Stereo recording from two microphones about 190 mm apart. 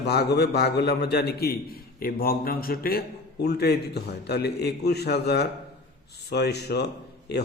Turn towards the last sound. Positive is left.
turn(degrees=60)  # may be behind; listen again after turning